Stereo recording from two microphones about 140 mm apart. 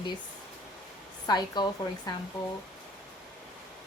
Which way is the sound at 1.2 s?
30° left (ahead or behind).